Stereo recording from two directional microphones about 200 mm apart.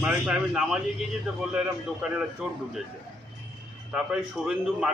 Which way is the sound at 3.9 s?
5° right (ahead or behind).